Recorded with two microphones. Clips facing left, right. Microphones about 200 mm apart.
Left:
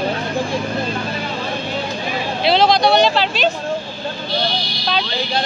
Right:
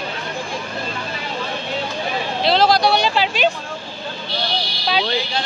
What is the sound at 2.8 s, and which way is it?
Speech, 10° right (ahead or behind).